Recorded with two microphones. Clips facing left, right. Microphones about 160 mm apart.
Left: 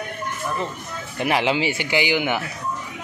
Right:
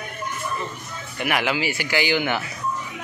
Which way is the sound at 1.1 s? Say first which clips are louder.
Left 3 dB; 30° left (ahead or behind).